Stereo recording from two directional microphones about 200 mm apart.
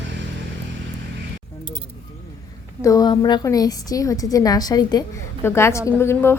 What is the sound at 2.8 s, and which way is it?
A woman's voice, 15° left (ahead or behind).